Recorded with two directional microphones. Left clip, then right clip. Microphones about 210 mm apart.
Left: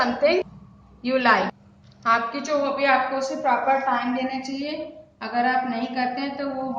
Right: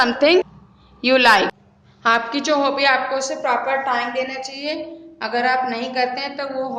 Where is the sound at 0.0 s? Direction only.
40° right (ahead or behind).